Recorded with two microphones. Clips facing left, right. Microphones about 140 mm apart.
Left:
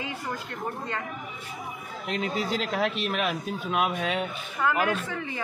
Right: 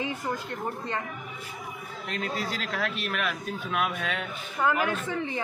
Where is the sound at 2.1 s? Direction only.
5° left (ahead or behind).